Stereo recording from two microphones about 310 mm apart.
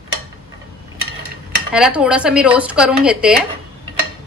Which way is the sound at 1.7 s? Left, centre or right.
Centre.